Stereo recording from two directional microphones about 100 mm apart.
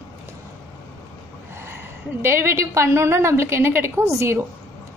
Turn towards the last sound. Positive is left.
turn(degrees=-30)  # may be behind; listen again after turning